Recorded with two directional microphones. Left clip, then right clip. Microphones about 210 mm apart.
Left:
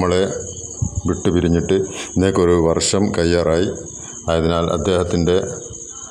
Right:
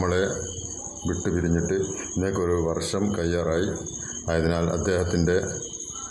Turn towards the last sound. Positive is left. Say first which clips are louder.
# left 7 dB
turn(degrees=30)  # may be behind; listen again after turning